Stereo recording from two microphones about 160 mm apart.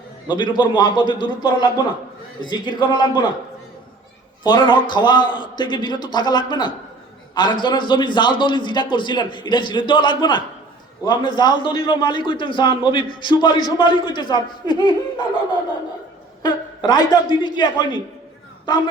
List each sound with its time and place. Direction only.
0.3 s a man's voice: 30° left (ahead or behind)
4.4 s a man's voice: 30° left (ahead or behind)
16.4 s a man's voice: 25° left (ahead or behind)